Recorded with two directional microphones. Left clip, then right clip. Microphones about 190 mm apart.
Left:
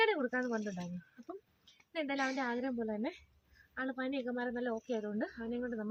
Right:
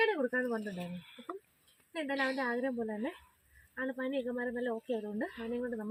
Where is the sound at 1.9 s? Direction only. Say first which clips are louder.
Right 2 dB; 20° left (ahead or behind).